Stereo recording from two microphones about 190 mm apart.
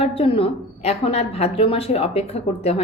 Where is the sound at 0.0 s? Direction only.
30° left (ahead or behind).